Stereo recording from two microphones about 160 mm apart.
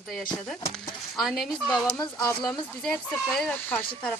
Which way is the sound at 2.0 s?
25° left (ahead or behind).